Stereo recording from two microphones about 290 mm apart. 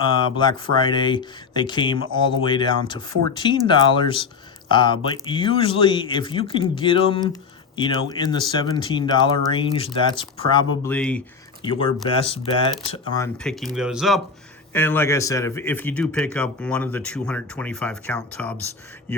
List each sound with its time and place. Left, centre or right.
0.2 s speech: centre
10.9 s speech: centre
11.6 s speech: centre
13.2 s speech: centre